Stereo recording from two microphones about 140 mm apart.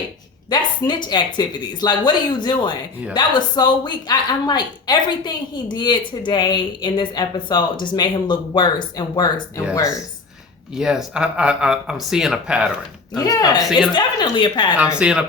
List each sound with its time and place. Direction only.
0.5 s a woman's voice: 35° left (ahead or behind)
10.8 s speech: 5° right (ahead or behind)
13.1 s a woman's voice: 25° left (ahead or behind)
14.8 s speech: 5° right (ahead or behind)